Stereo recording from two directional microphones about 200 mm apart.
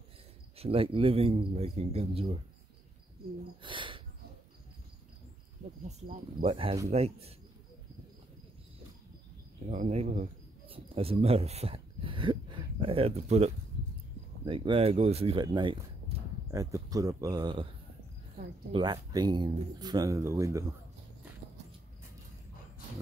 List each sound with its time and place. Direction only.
0.6 s speech: 30° right (ahead or behind)
3.6 s a sound: 25° right (ahead or behind)
5.9 s speech: 35° right (ahead or behind)
9.7 s speech: 35° right (ahead or behind)
18.7 s speech: 20° right (ahead or behind)